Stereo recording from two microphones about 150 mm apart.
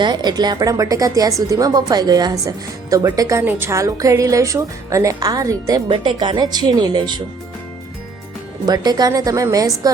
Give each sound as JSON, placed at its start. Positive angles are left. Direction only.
{"t": 0.0, "sound": "a woman's voice", "side_deg": -30}
{"t": 5.9, "sound": "a woman's voice", "side_deg": -35}
{"t": 8.6, "sound": "a woman's voice", "side_deg": -25}